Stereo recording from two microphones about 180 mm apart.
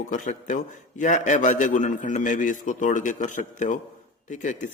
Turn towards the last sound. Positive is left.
turn(degrees=45)  # may be behind; listen again after turning